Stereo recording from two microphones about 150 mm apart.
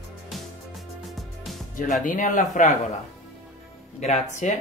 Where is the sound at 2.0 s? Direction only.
55° left (ahead or behind).